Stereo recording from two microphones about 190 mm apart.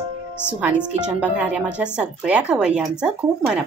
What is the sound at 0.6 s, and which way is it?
A woman's voice, 5° right (ahead or behind).